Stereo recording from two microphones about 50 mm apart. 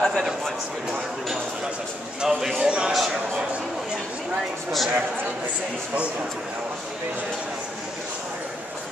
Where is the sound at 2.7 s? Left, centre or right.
Centre.